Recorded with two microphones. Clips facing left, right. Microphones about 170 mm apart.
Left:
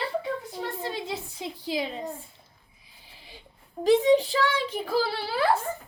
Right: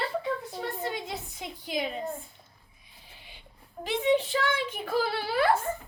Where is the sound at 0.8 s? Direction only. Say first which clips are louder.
Left 1 dB; 30° left (ahead or behind).